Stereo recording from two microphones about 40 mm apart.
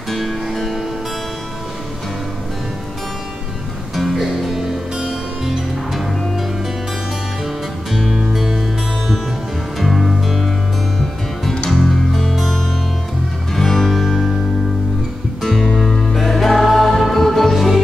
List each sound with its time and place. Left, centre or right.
0.1 s music: centre
3.9 s music: centre
4.6 s music: centre
7.9 s music: centre
11.7 s music: centre
15.4 s music: centre